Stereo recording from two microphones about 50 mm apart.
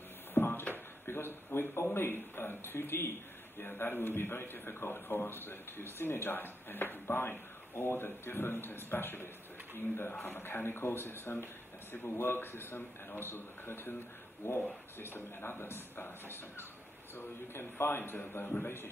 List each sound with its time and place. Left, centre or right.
0.3 s a sound: left
1.0 s a man's voice: left
18.4 s a man's voice: left